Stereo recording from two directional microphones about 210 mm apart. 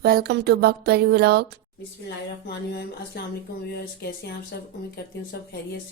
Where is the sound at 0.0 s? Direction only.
50° right (ahead or behind).